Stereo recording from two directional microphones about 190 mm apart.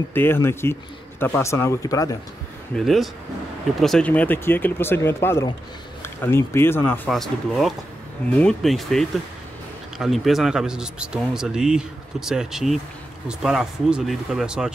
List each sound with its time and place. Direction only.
0.1 s speech: 10° left (ahead or behind)
2.7 s a man's voice: centre (ahead or behind)
7.1 s a man's voice: centre (ahead or behind)